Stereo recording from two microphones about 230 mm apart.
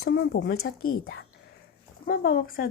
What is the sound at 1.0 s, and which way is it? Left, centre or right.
Speech, left.